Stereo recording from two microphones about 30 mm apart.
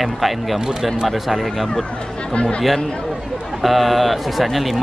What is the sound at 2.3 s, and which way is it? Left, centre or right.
Speech, left.